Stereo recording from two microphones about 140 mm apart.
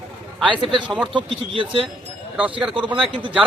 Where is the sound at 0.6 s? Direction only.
35° right (ahead or behind).